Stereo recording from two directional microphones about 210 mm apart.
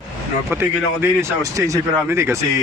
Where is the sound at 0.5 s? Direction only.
10° right (ahead or behind).